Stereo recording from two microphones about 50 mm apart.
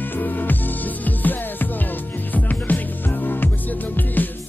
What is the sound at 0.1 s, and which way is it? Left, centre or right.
Music, left.